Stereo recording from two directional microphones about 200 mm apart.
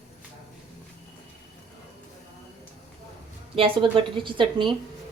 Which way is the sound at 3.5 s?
25° right (ahead or behind).